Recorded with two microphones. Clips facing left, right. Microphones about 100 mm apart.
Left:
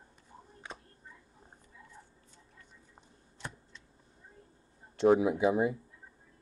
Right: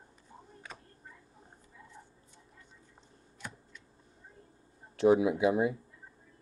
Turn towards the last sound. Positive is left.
turn(degrees=0)  # may be behind; listen again after turning